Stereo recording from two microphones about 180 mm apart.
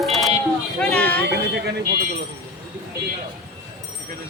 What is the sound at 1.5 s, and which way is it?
Speech, 70° right (ahead or behind).